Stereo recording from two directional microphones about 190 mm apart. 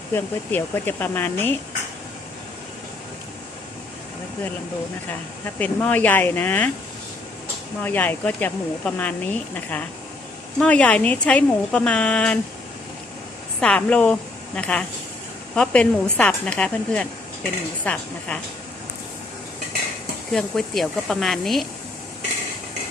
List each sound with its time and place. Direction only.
0.1 s speech: 10° left (ahead or behind)
5.5 s speech: 10° left (ahead or behind)
7.8 s speech: 10° left (ahead or behind)
13.6 s a woman's voice: 5° left (ahead or behind)
20.3 s a woman's voice: centre (ahead or behind)